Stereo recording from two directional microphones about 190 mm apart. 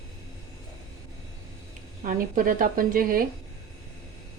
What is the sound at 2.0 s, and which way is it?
A woman's voice, 45° right (ahead or behind).